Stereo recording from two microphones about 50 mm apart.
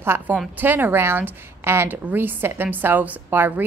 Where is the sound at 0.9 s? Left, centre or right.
Right.